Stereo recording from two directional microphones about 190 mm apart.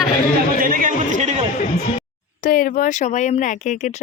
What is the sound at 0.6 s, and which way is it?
Speech, 45° right (ahead or behind).